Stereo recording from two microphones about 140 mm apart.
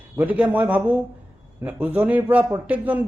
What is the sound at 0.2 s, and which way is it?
A man's voice, 10° right (ahead or behind).